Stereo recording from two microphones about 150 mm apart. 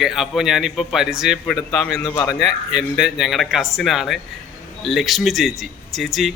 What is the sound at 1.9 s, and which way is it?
Speech, 20° left (ahead or behind).